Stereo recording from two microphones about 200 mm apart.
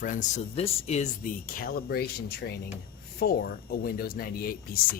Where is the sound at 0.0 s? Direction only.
40° left (ahead or behind).